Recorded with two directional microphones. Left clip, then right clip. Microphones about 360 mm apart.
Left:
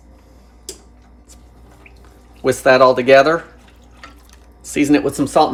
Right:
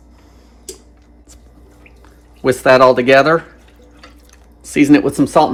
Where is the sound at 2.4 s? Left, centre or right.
Centre.